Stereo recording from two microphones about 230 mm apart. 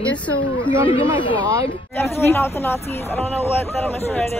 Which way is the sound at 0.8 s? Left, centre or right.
Left.